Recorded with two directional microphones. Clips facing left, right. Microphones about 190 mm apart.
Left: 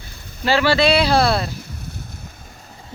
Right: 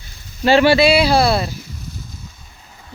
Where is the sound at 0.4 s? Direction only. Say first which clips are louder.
Right 5 dB; 20° right (ahead or behind).